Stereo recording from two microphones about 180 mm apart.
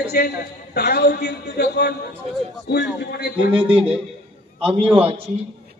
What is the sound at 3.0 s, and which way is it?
Speech, 65° left (ahead or behind).